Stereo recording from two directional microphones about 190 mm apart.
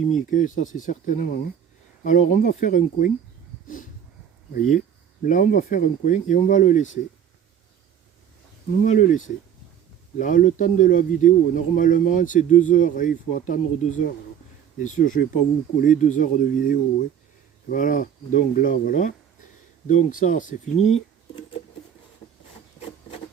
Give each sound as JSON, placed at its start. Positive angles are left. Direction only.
{"t": 0.1, "sound": "a man's voice", "side_deg": 40}
{"t": 5.2, "sound": "speech", "side_deg": 45}
{"t": 8.8, "sound": "a man's voice", "side_deg": 40}